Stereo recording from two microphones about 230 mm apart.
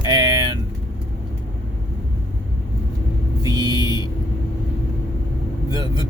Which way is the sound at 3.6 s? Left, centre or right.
Centre.